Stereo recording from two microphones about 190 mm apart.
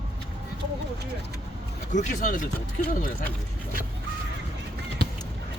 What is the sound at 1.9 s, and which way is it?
Speech, 40° left (ahead or behind).